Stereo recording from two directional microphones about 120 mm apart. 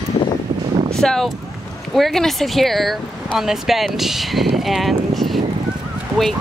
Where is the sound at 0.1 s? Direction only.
40° left (ahead or behind).